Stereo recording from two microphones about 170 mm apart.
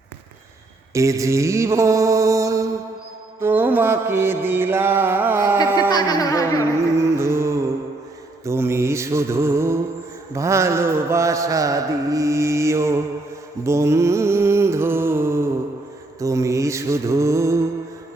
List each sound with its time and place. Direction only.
0.9 s mantra: 20° right (ahead or behind)
5.9 s music: 25° left (ahead or behind)
6.6 s music: 15° right (ahead or behind)
8.4 s mantra: 15° right (ahead or behind)
13.7 s music: 15° right (ahead or behind)
16.2 s mantra: 20° right (ahead or behind)